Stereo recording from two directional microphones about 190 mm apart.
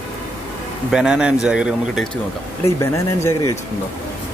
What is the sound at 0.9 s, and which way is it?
A man's voice, 5° right (ahead or behind).